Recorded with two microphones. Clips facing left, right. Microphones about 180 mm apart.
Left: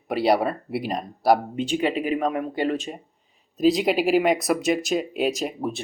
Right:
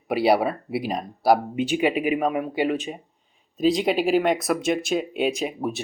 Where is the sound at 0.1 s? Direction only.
5° right (ahead or behind).